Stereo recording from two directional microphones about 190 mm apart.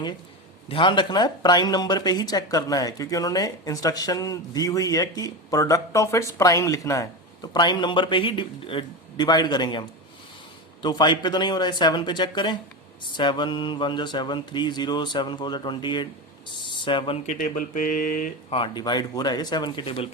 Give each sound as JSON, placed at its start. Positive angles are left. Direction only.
{"t": 0.7, "sound": "speech", "side_deg": 25}
{"t": 10.8, "sound": "speech", "side_deg": 20}
{"t": 17.2, "sound": "speech", "side_deg": 45}
{"t": 18.5, "sound": "speech", "side_deg": 25}